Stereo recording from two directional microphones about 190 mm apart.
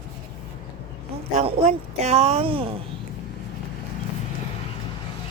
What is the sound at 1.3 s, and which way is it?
Speech, 35° right (ahead or behind).